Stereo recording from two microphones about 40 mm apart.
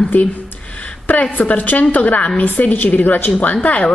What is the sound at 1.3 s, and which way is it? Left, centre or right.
A woman's voice, left.